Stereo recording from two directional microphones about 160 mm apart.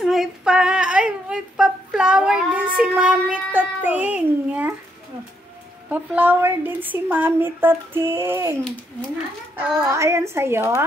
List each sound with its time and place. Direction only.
0.0 s speech: centre (ahead or behind)
5.9 s a woman's voice: 10° right (ahead or behind)
9.6 s a woman's voice: 20° right (ahead or behind)